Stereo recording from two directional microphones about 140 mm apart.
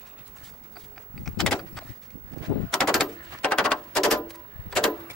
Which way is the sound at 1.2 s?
Centre (ahead or behind).